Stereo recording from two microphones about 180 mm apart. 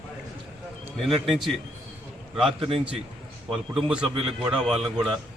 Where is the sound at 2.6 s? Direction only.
30° right (ahead or behind).